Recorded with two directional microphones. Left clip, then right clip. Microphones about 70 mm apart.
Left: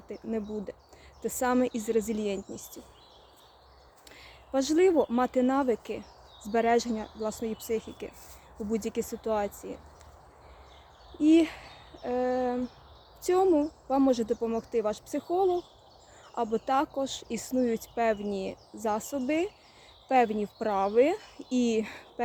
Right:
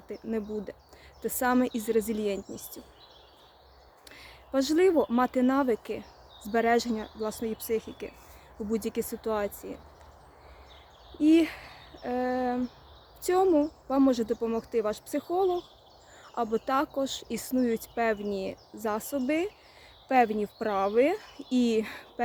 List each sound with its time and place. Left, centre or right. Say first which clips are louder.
0.1 s speech: right 1 dB; right
4.1 s speech: even; right
8.7 s speech: right 1 dB; right
11.2 s speech: even; right